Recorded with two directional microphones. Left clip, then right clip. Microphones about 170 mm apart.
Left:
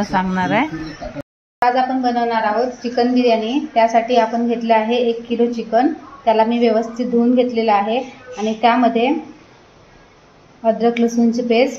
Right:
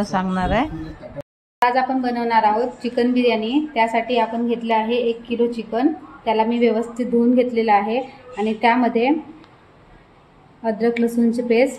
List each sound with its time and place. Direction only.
0.0 s speech: 5° right (ahead or behind)
1.7 s a woman's voice: 30° right (ahead or behind)
10.6 s a woman's voice: 20° right (ahead or behind)